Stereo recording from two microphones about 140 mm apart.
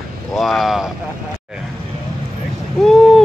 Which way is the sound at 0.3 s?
Centre (ahead or behind).